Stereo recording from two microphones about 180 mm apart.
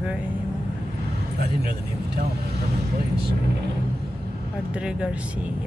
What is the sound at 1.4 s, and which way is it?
Speech, 60° right (ahead or behind).